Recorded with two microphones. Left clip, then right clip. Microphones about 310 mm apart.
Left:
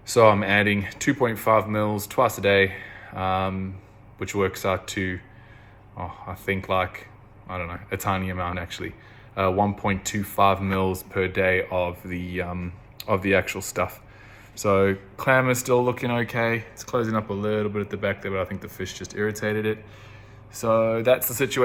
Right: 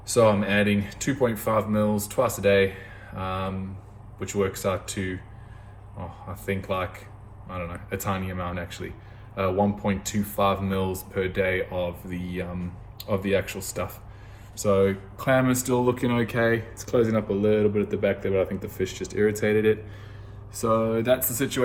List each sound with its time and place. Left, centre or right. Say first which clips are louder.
0.1 s speech: left 3 dB; centre
6.4 s speech: left 4 dB; centre